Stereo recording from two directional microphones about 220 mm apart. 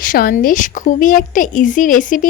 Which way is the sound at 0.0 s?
40° left (ahead or behind).